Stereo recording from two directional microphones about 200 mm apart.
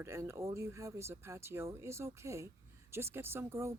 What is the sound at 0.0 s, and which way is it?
Speech, 15° right (ahead or behind).